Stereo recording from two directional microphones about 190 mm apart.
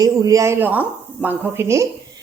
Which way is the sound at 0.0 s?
20° right (ahead or behind).